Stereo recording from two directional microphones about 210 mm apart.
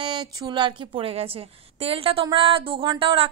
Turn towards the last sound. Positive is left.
turn(degrees=-25)  # may be behind; listen again after turning